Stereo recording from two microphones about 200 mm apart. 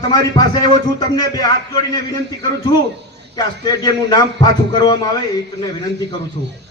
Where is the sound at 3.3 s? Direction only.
20° left (ahead or behind).